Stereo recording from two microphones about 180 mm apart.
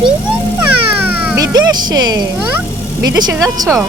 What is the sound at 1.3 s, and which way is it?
Speech, 20° right (ahead or behind).